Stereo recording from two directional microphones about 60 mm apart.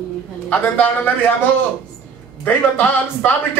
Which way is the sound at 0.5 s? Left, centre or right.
Left.